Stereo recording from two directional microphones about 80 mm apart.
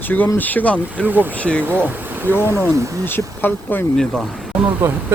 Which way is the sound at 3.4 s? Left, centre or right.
Left.